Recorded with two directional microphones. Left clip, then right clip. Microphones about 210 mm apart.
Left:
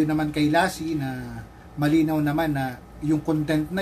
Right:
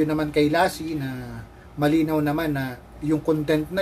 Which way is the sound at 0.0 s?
15° right (ahead or behind).